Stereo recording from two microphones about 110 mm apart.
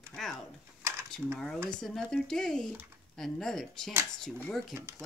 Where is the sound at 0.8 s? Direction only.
25° right (ahead or behind).